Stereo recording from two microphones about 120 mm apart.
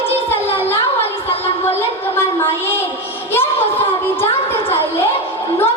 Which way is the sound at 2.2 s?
20° left (ahead or behind).